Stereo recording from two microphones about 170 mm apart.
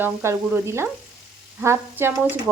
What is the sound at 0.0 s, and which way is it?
Stir, 15° right (ahead or behind).